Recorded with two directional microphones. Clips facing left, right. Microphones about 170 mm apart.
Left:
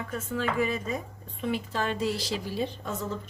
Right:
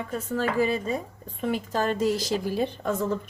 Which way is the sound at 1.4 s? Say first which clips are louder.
Right 3 dB; 40° right (ahead or behind).